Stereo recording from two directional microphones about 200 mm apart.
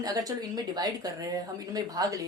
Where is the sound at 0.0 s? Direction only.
15° right (ahead or behind).